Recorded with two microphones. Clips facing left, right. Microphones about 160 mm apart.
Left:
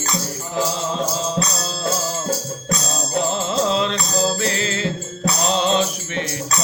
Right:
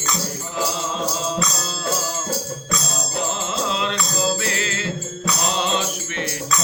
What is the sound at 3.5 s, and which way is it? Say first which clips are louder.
Music: left 6 dB; 40° left (ahead or behind).